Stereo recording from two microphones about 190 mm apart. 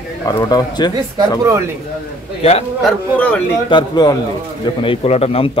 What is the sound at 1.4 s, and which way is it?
Speech, 15° right (ahead or behind).